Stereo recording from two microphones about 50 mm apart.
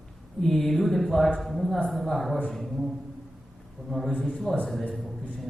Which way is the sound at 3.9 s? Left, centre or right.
Centre.